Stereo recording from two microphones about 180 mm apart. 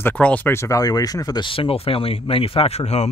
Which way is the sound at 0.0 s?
10° left (ahead or behind).